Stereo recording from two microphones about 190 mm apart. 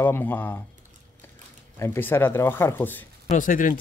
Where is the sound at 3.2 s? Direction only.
45° left (ahead or behind).